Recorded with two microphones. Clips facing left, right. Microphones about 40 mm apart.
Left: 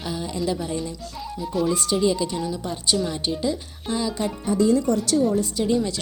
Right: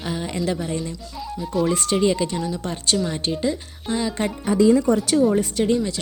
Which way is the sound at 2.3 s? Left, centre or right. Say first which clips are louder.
Right 1 dB; centre.